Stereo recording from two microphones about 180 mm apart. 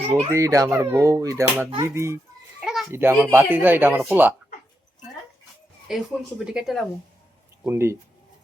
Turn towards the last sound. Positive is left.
turn(degrees=-15)  # may be behind; listen again after turning